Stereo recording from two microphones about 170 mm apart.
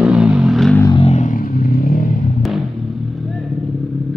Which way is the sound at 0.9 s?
40° left (ahead or behind).